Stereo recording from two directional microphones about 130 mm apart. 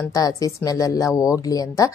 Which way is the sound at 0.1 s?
25° left (ahead or behind).